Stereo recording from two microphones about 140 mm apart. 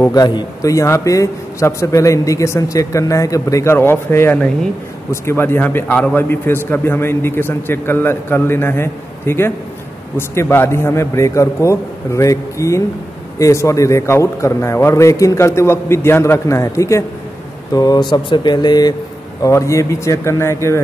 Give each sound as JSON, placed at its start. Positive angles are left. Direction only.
{"t": 0.0, "sound": "a man's voice", "side_deg": 25}